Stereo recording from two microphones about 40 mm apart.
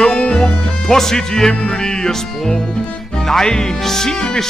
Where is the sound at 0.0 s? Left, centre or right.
Centre.